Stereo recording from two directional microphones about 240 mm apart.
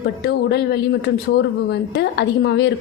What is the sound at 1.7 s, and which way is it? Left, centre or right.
Speech, left.